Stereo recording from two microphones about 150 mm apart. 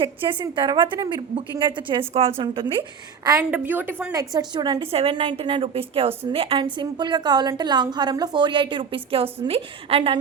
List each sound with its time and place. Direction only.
0.0 s a woman's voice: 35° right (ahead or behind)
3.5 s a woman's voice: 10° right (ahead or behind); by 10.2 s 40° right (ahead or behind)